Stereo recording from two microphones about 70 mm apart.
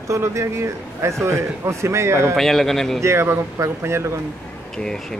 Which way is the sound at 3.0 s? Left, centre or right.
Right.